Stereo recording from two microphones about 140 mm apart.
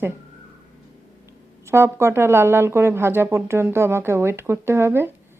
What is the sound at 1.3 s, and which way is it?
Speech, 20° right (ahead or behind).